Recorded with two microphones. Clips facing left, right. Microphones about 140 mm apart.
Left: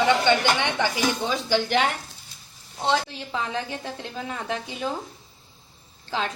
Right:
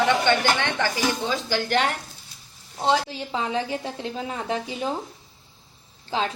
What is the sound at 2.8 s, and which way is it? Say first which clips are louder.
A woman's voice: right 2 dB; 30° right (ahead or behind).